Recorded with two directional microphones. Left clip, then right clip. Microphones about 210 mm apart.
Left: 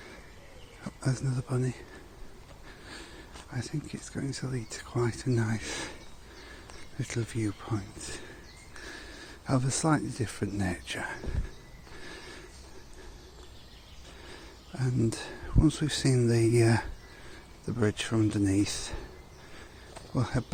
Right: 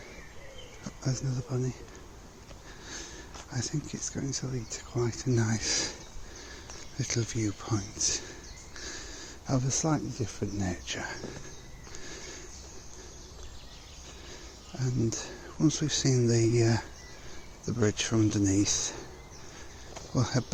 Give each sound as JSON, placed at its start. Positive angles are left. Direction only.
{"t": 1.0, "sound": "speech", "side_deg": 25}
{"t": 2.8, "sound": "sniff", "side_deg": 5}
{"t": 3.5, "sound": "speech", "side_deg": 10}
{"t": 8.8, "sound": "a sound", "side_deg": 10}
{"t": 10.6, "sound": "speech", "side_deg": 15}
{"t": 11.9, "sound": "a sound", "side_deg": 15}
{"t": 14.8, "sound": "speech", "side_deg": 20}
{"t": 20.1, "sound": "speech", "side_deg": 5}